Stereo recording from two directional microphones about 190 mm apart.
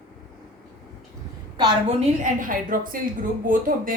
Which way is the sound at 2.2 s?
45° right (ahead or behind).